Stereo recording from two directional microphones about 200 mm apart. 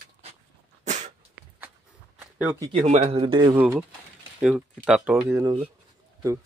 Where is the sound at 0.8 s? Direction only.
35° right (ahead or behind).